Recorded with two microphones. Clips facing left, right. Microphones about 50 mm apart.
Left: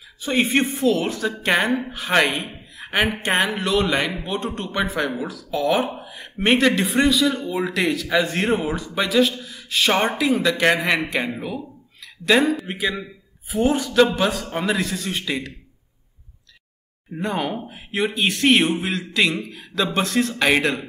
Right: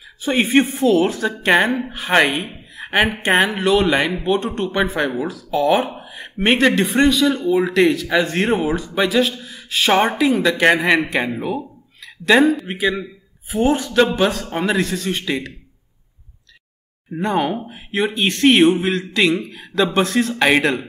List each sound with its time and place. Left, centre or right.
0.2 s speech: centre
2.7 s a sound: centre
3.0 s a man's voice: centre
10.5 s a man's voice: centre
11.3 s a sound: centre
12.3 s a man's voice: centre
14.5 s speech: centre
14.8 s a man's voice: centre
17.2 s a man's voice: centre